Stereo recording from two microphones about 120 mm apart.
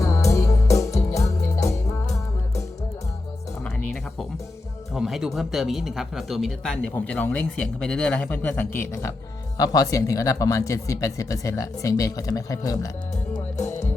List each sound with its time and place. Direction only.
0.0 s music: 25° left (ahead or behind)
4.9 s speech: 5° right (ahead or behind)
6.9 s speech: 15° left (ahead or behind); by 12.9 s 30° left (ahead or behind)